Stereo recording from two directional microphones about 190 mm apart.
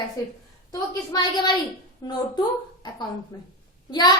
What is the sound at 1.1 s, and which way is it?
A woman's voice, 25° left (ahead or behind).